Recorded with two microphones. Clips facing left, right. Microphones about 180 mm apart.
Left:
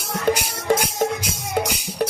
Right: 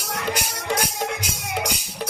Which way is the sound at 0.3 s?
50° left (ahead or behind).